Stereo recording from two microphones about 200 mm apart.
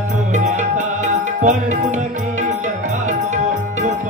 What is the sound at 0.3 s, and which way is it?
Music, 35° right (ahead or behind).